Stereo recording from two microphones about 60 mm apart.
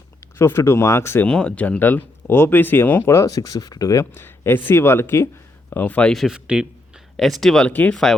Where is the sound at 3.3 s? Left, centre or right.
Left.